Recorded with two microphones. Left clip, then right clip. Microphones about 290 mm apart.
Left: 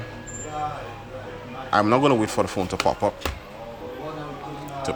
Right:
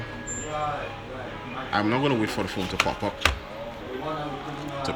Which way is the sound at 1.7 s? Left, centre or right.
Centre.